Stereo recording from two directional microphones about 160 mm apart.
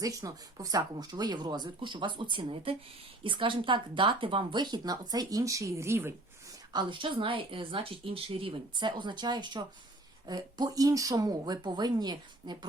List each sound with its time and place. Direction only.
0.0 s speech: 20° right (ahead or behind)
6.7 s speech: 30° right (ahead or behind)